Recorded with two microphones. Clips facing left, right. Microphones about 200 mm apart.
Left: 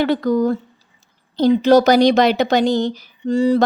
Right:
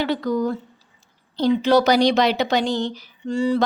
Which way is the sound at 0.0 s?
50° left (ahead or behind).